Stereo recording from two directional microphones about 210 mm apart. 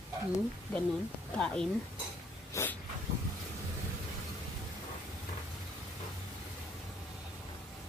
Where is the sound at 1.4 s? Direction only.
5° left (ahead or behind).